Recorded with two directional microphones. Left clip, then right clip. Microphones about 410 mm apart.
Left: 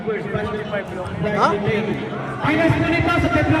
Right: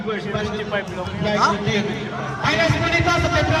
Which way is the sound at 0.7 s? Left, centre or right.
Centre.